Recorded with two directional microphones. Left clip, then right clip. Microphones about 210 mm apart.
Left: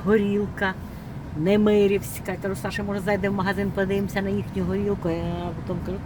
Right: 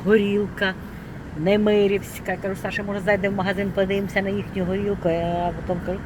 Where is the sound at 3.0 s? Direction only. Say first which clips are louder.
Right 3 dB; 15° left (ahead or behind).